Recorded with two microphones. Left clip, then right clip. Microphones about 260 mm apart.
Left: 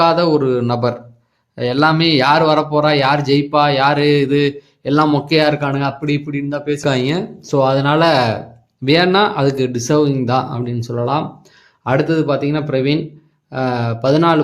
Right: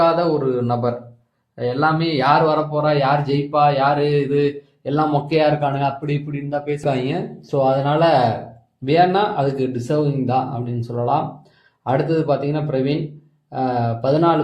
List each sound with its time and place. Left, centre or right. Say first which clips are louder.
0.0 s a man's voice: left 3 dB; left